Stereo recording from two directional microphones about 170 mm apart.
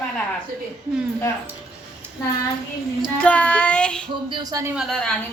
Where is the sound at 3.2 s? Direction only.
5° left (ahead or behind).